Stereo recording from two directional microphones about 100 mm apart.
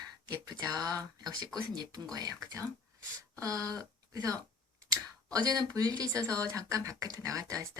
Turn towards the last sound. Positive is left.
turn(degrees=-35)  # may be behind; listen again after turning